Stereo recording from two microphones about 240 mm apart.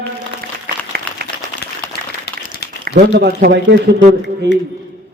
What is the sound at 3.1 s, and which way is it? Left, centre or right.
Speech, right.